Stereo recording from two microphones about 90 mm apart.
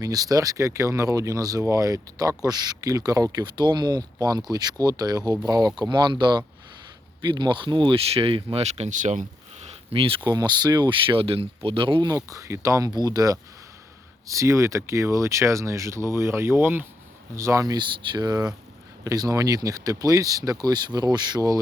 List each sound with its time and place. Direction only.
0.0 s speech: 45° right (ahead or behind)
3.3 s speech: 55° right (ahead or behind); by 8.6 s 80° right
9.9 s speech: 90° right
10.2 s speech: 45° right (ahead or behind)
11.0 s speech: 80° right
12.0 s speech: 35° right (ahead or behind)
17.7 s speech: 60° right (ahead or behind)